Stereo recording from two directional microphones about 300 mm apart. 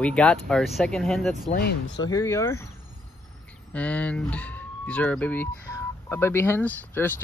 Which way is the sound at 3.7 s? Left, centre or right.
Centre.